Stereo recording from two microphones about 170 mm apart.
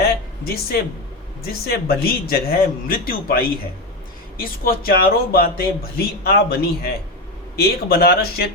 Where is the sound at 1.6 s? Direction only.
65° left (ahead or behind).